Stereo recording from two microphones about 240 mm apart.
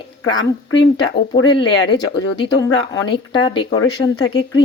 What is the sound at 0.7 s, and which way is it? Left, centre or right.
Speech, left.